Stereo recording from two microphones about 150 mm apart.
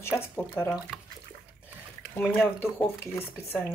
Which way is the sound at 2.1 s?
15° left (ahead or behind).